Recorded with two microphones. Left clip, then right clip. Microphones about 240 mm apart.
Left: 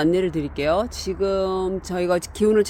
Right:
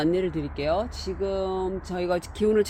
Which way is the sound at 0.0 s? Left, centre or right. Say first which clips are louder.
Left 4 dB; left.